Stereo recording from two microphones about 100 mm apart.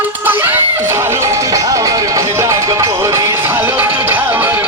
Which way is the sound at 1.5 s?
35° right (ahead or behind).